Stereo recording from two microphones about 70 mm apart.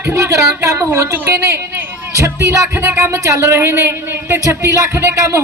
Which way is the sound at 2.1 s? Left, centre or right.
Right.